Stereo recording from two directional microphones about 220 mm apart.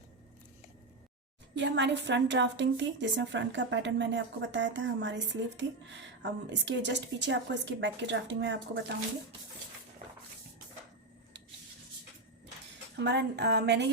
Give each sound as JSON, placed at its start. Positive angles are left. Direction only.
{"t": 1.5, "sound": "a woman's voice", "side_deg": -55}
{"t": 13.0, "sound": "speech", "side_deg": -50}